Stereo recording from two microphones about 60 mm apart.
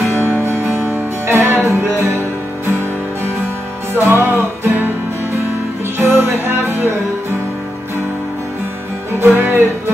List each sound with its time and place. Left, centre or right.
0.2 s music: right
3.9 s music: right
5.9 s music: right
9.2 s music: right